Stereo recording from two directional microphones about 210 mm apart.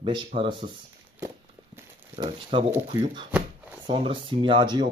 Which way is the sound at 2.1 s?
25° right (ahead or behind).